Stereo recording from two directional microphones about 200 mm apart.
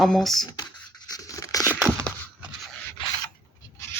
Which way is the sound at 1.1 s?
15° left (ahead or behind).